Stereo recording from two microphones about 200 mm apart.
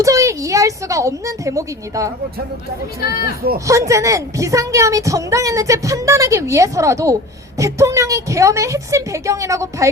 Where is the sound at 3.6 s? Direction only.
15° right (ahead or behind).